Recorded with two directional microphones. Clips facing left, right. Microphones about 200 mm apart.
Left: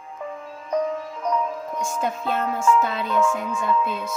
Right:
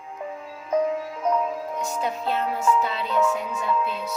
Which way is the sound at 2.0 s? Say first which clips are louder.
Left 1 dB; 50° left (ahead or behind).